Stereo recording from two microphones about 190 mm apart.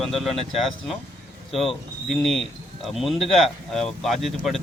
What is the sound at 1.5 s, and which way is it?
Speech, centre (ahead or behind).